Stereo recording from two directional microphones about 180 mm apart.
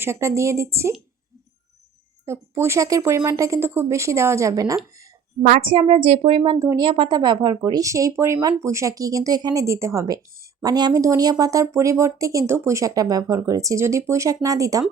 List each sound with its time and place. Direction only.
0.0 s speech: 15° right (ahead or behind)
2.2 s speech: 15° right (ahead or behind)
5.4 s a woman's voice: 45° right (ahead or behind)
5.6 s speech: 30° right (ahead or behind)